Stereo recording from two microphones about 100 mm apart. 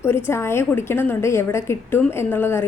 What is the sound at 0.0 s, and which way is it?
A woman's voice, 25° left (ahead or behind).